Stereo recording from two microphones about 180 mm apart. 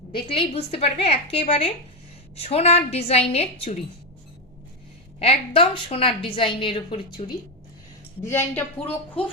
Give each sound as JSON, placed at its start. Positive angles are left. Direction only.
{"t": 0.1, "sound": "a woman's voice", "side_deg": 30}
{"t": 5.2, "sound": "a woman's voice", "side_deg": 30}
{"t": 8.2, "sound": "speech", "side_deg": 15}